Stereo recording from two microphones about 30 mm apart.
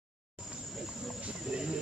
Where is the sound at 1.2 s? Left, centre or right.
Right.